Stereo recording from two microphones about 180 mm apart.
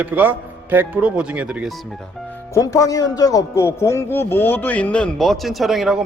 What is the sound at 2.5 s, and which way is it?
Speech, 15° left (ahead or behind).